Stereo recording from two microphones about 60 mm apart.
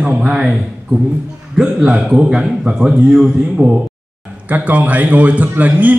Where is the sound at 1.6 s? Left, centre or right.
Centre.